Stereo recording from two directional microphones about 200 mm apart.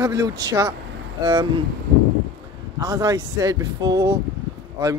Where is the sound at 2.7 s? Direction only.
20° right (ahead or behind).